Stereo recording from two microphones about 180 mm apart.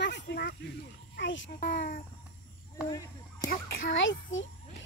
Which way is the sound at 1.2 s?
85° left.